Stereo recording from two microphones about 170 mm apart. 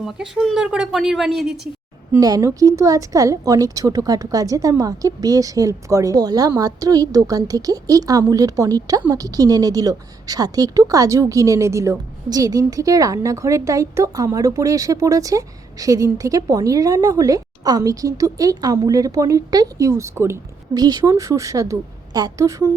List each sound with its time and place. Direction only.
0.0 s a woman's voice: centre (ahead or behind)
2.1 s speech: 20° right (ahead or behind)